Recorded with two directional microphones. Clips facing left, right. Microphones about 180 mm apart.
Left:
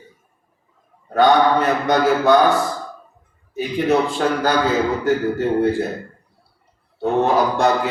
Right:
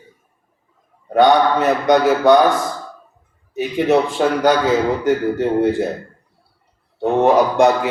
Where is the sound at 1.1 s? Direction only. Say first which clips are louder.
Right 1 dB; 15° right (ahead or behind).